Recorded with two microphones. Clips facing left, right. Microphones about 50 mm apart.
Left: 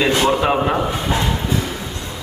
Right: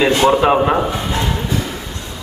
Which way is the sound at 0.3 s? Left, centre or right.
Centre.